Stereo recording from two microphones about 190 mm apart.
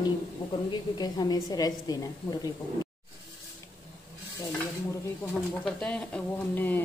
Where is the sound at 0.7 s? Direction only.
20° left (ahead or behind).